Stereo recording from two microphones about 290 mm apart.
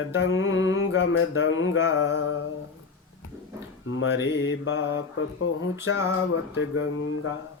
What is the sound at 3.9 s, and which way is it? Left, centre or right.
Mantra, left.